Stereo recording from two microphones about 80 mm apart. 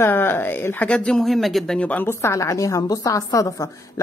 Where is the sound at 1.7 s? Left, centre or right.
Centre.